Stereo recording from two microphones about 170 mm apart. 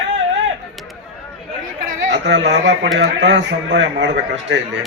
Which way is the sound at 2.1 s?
90° right.